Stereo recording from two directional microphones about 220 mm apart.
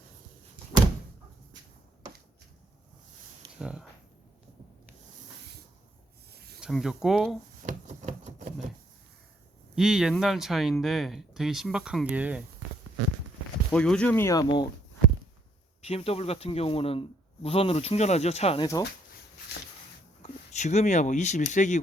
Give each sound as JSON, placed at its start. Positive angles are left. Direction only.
{"t": 3.6, "sound": "speech", "side_deg": -5}
{"t": 6.3, "sound": "a sound", "side_deg": -45}
{"t": 6.6, "sound": "speech", "side_deg": 0}
{"t": 7.7, "sound": "a sound", "side_deg": -35}
{"t": 9.7, "sound": "speech", "side_deg": -5}
{"t": 13.7, "sound": "speech", "side_deg": 5}
{"t": 15.8, "sound": "speech", "side_deg": 25}
{"t": 20.2, "sound": "speech", "side_deg": 30}